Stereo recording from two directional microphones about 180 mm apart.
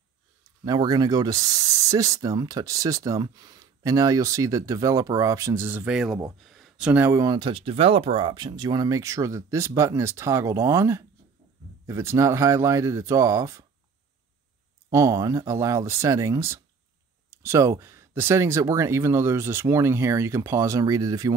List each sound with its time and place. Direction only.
0.7 s speech: 20° right (ahead or behind)
14.9 s speech: 20° right (ahead or behind)